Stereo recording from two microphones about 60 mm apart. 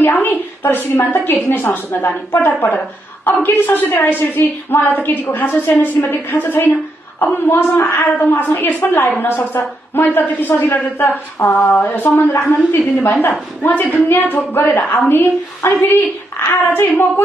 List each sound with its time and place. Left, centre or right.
0.0 s a woman's voice: left